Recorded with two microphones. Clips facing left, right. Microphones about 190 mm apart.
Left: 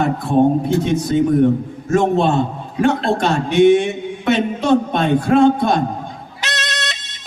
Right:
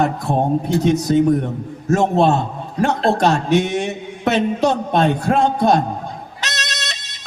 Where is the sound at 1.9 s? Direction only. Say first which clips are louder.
Even; 40° right (ahead or behind).